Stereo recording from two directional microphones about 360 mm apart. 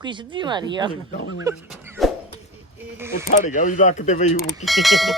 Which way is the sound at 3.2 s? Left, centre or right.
Left.